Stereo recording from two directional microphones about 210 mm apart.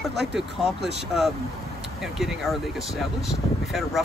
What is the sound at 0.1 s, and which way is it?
Speech, 55° right (ahead or behind).